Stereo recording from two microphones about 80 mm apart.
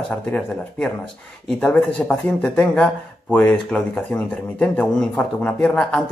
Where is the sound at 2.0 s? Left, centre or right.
Centre.